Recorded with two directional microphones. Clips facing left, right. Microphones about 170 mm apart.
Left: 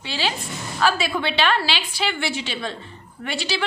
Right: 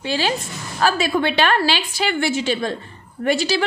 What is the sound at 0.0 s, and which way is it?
A woman's voice, 45° right (ahead or behind).